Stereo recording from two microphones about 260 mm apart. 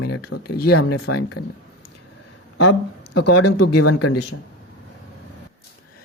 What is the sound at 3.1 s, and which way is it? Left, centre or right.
Speech, left.